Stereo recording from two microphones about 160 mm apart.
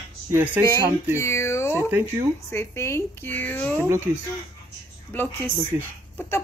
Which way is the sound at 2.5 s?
15° left (ahead or behind).